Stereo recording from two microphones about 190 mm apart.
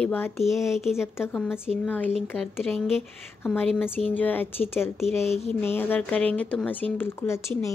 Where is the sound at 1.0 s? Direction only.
10° left (ahead or behind).